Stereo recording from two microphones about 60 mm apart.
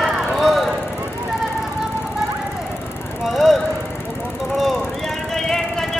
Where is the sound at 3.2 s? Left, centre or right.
Centre.